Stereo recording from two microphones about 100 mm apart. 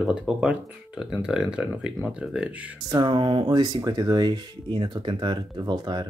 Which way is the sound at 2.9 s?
55° right (ahead or behind).